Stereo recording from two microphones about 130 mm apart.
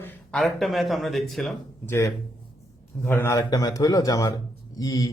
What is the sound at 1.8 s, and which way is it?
A man's voice, 20° left (ahead or behind).